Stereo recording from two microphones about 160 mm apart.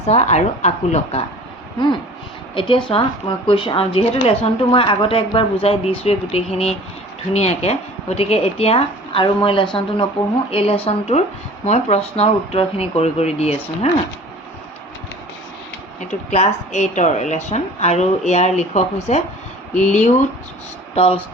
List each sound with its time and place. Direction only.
0.0 s a woman's voice: 40° left (ahead or behind)
2.6 s a woman's voice: 30° left (ahead or behind)
16.0 s a woman's voice: 45° left (ahead or behind)